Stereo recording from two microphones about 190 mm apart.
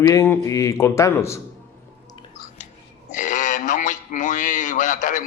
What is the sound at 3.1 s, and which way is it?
A man's voice, 45° left (ahead or behind).